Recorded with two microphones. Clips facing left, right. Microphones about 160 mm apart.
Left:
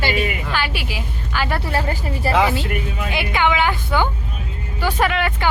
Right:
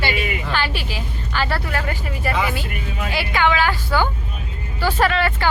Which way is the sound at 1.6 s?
35° left (ahead or behind).